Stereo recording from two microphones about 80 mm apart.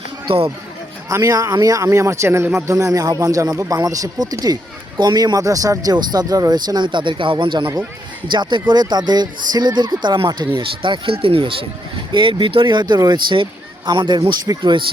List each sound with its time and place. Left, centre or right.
1.2 s speech: right
2.7 s speech: right
8.3 s speech: right
10.6 s speech: right